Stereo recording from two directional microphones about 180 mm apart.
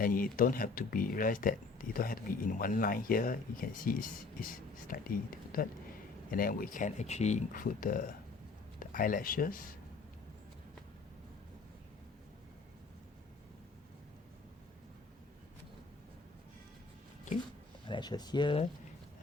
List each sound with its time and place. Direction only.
0.0 s speech: 50° left (ahead or behind)
17.8 s speech: 25° left (ahead or behind)